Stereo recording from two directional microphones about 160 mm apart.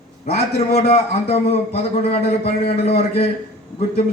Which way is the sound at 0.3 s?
40° left (ahead or behind).